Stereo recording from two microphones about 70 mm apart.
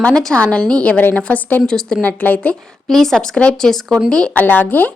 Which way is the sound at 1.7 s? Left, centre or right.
Centre.